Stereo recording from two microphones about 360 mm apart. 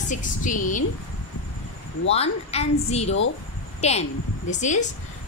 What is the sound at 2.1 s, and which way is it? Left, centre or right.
A woman's voice, centre.